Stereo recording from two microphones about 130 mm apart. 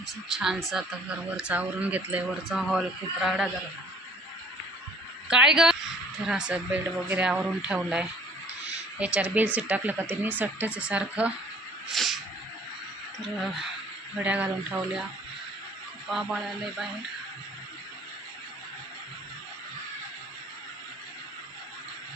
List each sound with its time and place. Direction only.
0.3 s speech: centre (ahead or behind)
2.5 s speech: centre (ahead or behind)
5.3 s speech: 5° right (ahead or behind)
11.9 s snake: centre (ahead or behind)
13.2 s speech: centre (ahead or behind)
14.2 s speech: 10° right (ahead or behind)
16.0 s speech: 5° right (ahead or behind)